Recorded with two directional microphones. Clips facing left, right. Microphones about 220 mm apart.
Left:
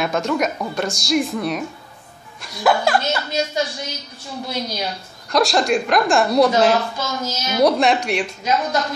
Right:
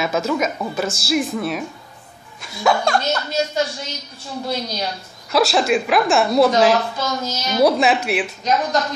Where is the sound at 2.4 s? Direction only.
Centre (ahead or behind).